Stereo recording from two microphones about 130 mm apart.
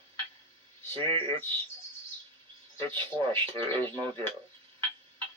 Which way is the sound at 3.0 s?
40° right (ahead or behind).